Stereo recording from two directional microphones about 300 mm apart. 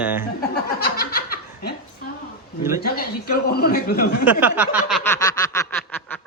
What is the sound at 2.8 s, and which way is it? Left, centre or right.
A man's voice, left.